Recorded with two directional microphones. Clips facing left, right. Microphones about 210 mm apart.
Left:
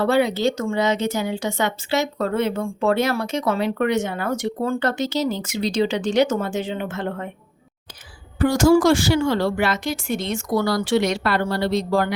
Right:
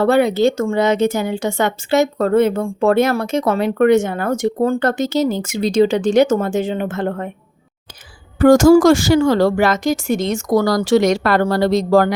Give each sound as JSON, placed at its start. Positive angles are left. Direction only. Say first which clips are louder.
{"t": 0.0, "sound": "speech", "louder": "right 5 dB", "side_deg": -50}
{"t": 8.4, "sound": "speech", "louder": "right 7 dB", "side_deg": -45}